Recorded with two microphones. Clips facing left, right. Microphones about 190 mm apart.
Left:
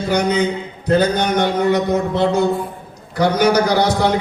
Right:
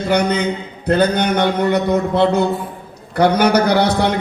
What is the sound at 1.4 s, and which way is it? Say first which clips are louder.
Speech: left 1 dB; 60° right (ahead or behind).